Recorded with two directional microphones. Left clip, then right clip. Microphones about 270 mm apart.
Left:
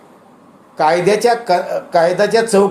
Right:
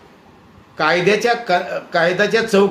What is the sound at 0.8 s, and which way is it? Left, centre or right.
A man's voice, centre.